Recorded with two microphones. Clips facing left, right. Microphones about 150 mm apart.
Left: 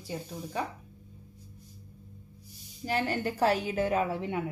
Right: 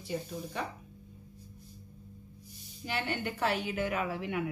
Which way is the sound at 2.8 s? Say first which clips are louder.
Left 5 dB; 35° left (ahead or behind).